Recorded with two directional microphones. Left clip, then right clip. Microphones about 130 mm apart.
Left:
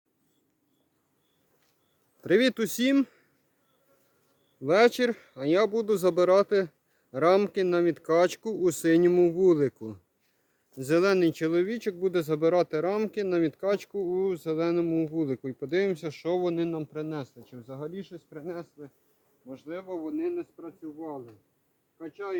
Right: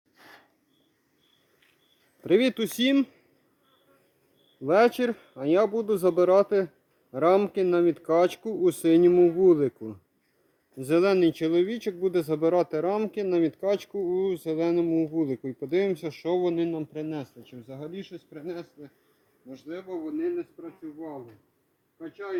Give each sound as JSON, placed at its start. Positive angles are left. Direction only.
{"t": 2.2, "sound": "speech", "side_deg": 15}
{"t": 4.6, "sound": "speech", "side_deg": 15}
{"t": 19.9, "sound": "speech", "side_deg": 5}
{"t": 20.3, "sound": "speech", "side_deg": -30}